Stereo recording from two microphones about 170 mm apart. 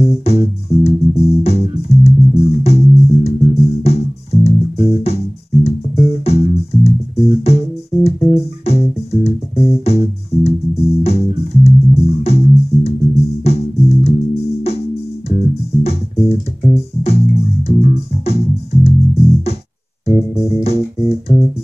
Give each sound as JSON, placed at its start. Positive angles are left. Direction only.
{"t": 0.0, "sound": "music", "side_deg": 35}
{"t": 15.8, "sound": "music", "side_deg": 35}